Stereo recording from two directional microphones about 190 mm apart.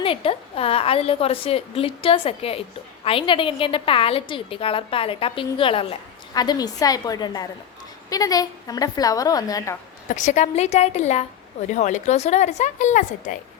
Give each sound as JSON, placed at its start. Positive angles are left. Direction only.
{"t": 0.0, "sound": "a woman's voice", "side_deg": 30}
{"t": 10.2, "sound": "speech", "side_deg": 40}